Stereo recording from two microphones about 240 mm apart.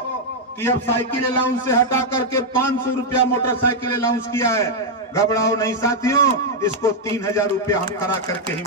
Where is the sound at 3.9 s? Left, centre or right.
Centre.